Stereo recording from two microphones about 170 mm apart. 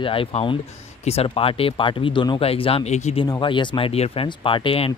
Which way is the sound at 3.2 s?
25° left (ahead or behind).